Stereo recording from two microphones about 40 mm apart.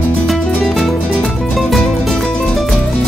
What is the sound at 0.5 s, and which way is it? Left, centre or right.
Music, centre.